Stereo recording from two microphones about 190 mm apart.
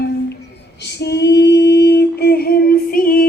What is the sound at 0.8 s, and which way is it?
Female singing, 65° left (ahead or behind).